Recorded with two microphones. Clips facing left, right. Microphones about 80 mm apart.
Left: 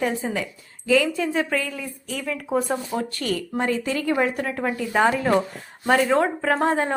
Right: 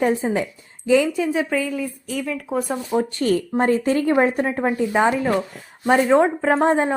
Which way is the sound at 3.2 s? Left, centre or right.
Right.